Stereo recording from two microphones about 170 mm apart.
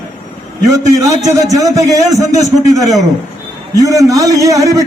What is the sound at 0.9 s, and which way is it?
A man's voice, 20° right (ahead or behind).